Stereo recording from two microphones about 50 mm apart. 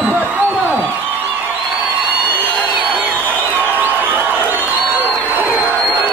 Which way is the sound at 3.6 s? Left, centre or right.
Right.